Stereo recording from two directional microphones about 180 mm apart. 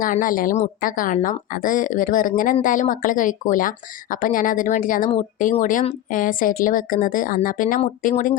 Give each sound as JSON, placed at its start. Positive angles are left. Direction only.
{"t": 0.0, "sound": "speech", "side_deg": 50}